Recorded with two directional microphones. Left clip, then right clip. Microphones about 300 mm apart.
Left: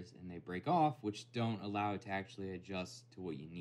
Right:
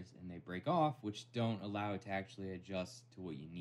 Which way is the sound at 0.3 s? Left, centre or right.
Centre.